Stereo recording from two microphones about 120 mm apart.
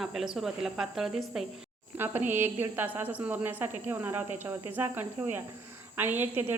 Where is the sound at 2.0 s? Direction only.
15° right (ahead or behind).